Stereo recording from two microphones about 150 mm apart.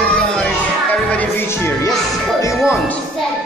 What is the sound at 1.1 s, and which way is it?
Music, 15° left (ahead or behind).